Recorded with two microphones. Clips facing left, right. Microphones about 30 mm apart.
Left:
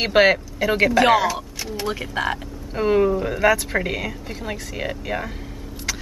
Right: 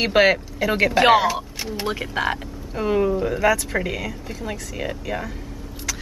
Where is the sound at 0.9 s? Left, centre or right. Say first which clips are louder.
Right 4 dB; centre.